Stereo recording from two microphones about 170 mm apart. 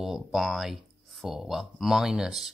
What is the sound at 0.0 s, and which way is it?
Speech, centre (ahead or behind).